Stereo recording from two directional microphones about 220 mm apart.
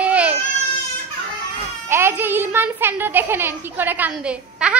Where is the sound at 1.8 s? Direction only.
10° right (ahead or behind).